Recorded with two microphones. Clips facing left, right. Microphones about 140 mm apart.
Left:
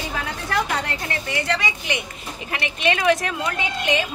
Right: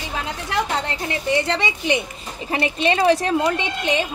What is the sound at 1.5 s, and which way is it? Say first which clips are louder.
Speech: right 4 dB; 30° right (ahead or behind).